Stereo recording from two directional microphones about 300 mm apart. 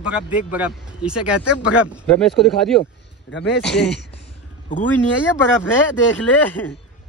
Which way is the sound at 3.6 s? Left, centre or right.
Centre.